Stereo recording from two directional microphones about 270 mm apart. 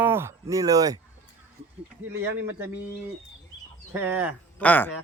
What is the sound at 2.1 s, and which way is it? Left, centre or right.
Speech, centre.